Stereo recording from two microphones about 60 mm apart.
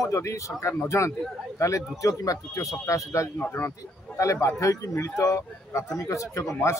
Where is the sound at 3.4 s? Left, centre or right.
Left.